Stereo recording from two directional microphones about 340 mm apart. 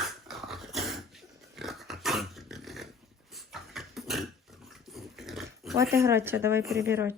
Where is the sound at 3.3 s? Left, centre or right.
Centre.